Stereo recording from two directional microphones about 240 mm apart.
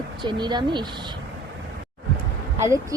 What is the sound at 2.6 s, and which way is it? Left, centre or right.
Speech, centre.